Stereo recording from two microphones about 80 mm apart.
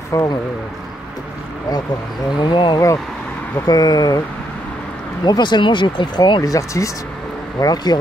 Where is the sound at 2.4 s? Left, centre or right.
Left.